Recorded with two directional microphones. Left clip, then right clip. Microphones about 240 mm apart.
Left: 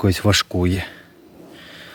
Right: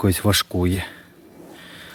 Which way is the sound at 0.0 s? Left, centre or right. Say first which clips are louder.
Left 2 dB; centre.